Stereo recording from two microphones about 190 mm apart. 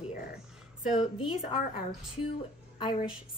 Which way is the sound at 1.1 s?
30° left (ahead or behind).